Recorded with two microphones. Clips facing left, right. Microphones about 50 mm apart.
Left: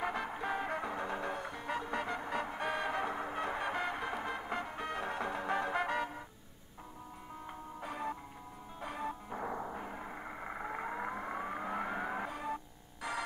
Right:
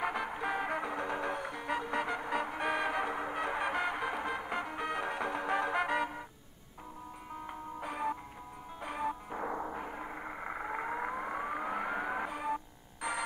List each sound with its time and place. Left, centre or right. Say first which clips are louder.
0.0 s music: right 2 dB; centre
7.4 s music: right 3 dB; centre